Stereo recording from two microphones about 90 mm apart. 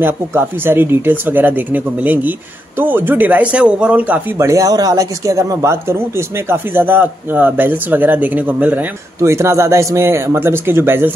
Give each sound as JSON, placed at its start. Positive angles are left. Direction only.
{"t": 0.0, "sound": "speech", "side_deg": -25}
{"t": 4.4, "sound": "speech", "side_deg": -35}
{"t": 9.2, "sound": "speech", "side_deg": -30}